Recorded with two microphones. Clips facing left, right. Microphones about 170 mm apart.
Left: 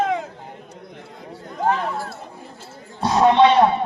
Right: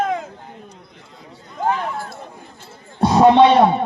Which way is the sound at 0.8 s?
55° left (ahead or behind).